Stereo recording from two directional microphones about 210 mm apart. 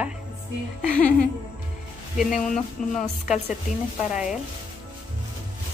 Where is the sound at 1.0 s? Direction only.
5° left (ahead or behind).